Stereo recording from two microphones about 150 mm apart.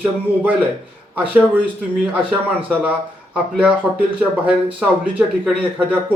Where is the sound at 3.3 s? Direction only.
10° right (ahead or behind).